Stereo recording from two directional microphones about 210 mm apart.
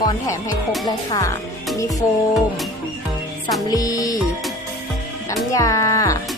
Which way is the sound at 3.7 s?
15° left (ahead or behind).